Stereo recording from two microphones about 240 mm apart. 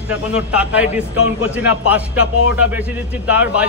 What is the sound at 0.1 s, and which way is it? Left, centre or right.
A man's voice, centre.